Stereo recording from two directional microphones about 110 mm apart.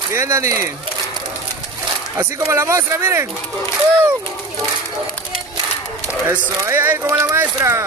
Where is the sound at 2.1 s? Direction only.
25° right (ahead or behind).